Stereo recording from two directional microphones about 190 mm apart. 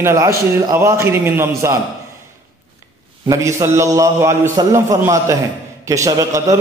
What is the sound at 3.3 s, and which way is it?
A man's voice, 15° right (ahead or behind).